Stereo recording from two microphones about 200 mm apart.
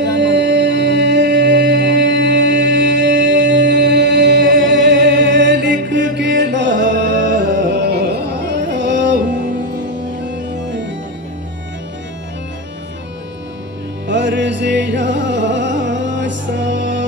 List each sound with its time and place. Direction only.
0.1 s music: 60° right (ahead or behind)
4.6 s mantra: 65° right (ahead or behind)
6.1 s music: 60° right (ahead or behind)
7.7 s carnatic music: 55° right (ahead or behind)
10.2 s music: 60° right (ahead or behind)
14.0 s music: 60° right (ahead or behind)